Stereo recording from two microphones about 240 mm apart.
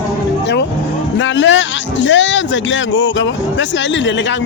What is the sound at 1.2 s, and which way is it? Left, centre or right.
Speech, left.